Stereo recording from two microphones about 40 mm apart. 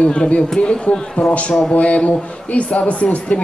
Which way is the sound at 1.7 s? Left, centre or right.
Left.